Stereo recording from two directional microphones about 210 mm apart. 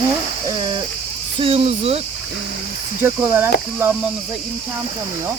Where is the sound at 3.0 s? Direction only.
10° right (ahead or behind).